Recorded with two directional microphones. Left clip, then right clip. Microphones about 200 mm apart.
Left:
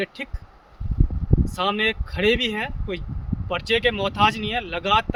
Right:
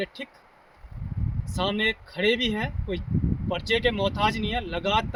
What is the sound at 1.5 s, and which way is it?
Speech, 5° right (ahead or behind).